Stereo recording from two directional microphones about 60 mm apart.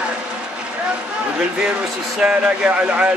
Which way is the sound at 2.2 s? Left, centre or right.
Centre.